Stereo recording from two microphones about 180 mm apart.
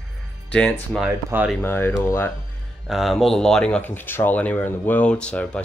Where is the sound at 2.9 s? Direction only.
Centre (ahead or behind).